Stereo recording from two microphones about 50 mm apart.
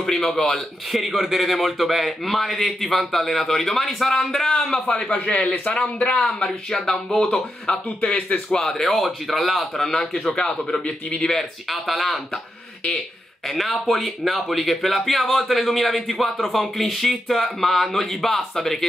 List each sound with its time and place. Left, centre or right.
0.0 s a man's voice: centre
0.9 s a man's voice: centre
5.1 s a man's voice: left
8.5 s a man's voice: centre
9.8 s a man's voice: centre
11.7 s speech: centre
13.5 s speech: centre